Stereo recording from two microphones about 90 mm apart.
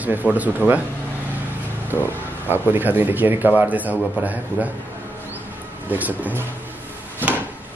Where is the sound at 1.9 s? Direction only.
25° right (ahead or behind).